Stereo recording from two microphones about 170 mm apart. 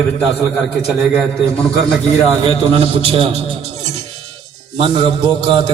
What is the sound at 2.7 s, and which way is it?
Speech, 35° right (ahead or behind).